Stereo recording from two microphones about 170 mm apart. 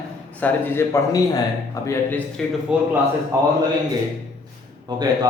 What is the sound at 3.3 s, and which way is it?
Speech, 15° right (ahead or behind).